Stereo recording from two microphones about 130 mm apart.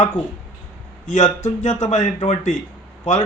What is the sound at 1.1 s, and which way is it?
Speech, 65° left (ahead or behind).